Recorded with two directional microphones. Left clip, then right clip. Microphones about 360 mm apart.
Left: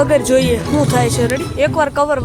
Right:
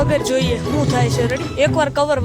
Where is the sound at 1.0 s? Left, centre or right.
Right.